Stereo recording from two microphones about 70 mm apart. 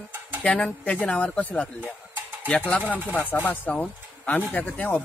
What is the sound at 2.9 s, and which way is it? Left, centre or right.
Speech, left.